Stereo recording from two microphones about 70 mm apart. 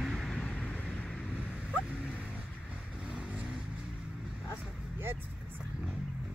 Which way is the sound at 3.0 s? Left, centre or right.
Centre.